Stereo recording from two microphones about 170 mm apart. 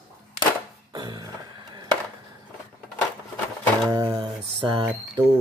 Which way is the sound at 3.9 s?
15° right (ahead or behind).